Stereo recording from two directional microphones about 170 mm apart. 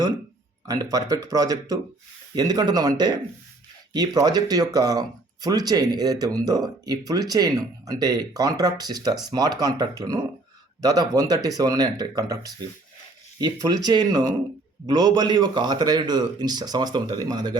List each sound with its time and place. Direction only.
0.7 s speech: 20° right (ahead or behind)